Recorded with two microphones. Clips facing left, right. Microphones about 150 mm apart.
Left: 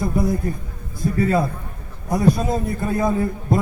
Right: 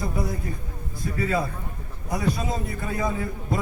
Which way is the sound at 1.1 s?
45° left (ahead or behind).